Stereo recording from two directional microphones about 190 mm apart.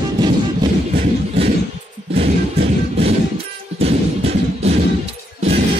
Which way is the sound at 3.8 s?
35° right (ahead or behind).